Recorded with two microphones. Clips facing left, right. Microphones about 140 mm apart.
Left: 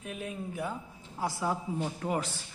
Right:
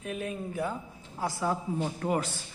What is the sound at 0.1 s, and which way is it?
Speech, 5° left (ahead or behind).